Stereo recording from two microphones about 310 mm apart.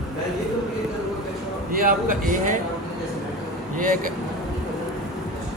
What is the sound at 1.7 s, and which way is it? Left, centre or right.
Speech, right.